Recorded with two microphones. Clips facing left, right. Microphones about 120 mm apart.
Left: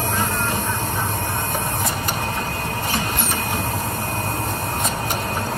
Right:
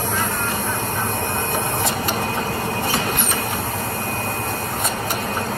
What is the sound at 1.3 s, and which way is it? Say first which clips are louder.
Printer: right 2 dB; 15° right (ahead or behind).